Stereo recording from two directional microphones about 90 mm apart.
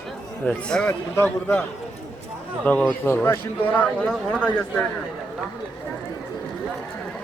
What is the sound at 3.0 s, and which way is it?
A man's voice, 25° left (ahead or behind).